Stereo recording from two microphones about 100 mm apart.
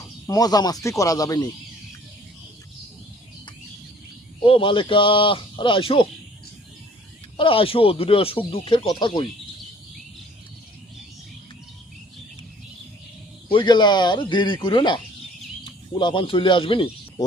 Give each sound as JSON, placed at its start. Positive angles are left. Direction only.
{"t": 0.3, "sound": "speech", "side_deg": 40}
{"t": 4.4, "sound": "speech", "side_deg": 65}
{"t": 7.3, "sound": "speech", "side_deg": 65}
{"t": 8.9, "sound": "speech", "side_deg": 50}
{"t": 13.5, "sound": "speech", "side_deg": 50}